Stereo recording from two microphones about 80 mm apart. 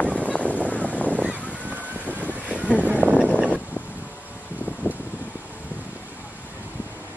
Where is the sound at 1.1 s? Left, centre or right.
Centre.